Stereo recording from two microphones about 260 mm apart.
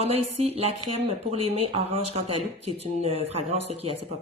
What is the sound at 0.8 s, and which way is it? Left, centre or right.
Speech, right.